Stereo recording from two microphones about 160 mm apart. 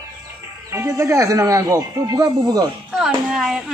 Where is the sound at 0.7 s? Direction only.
15° right (ahead or behind).